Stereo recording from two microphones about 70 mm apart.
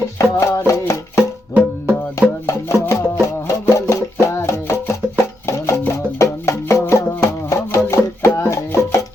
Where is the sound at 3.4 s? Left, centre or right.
Left.